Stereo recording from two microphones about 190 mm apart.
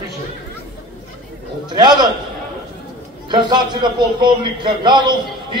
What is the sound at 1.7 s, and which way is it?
Speech, 25° right (ahead or behind).